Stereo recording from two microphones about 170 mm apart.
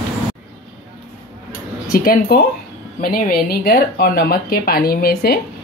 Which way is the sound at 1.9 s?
60° left (ahead or behind).